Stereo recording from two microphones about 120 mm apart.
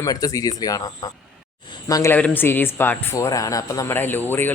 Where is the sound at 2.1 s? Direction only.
15° left (ahead or behind).